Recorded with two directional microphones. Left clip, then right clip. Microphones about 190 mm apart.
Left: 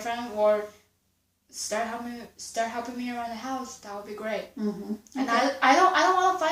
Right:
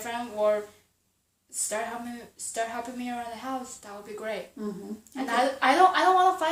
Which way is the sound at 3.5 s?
45° right (ahead or behind).